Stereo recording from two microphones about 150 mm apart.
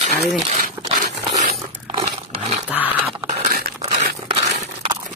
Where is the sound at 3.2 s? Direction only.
45° right (ahead or behind).